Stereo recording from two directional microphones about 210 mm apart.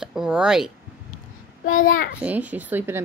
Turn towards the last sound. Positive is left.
turn(degrees=-10)  # may be behind; listen again after turning